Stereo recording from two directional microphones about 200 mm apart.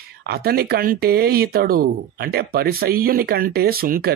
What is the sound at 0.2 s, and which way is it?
Speech, 50° right (ahead or behind).